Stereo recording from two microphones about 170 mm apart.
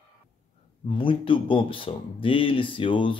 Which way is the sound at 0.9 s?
30° left (ahead or behind).